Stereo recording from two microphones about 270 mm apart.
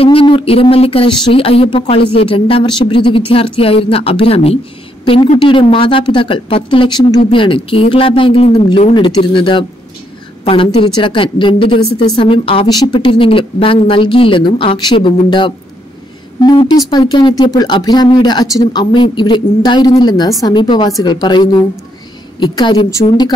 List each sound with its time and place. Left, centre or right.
0.0 s a woman's voice: centre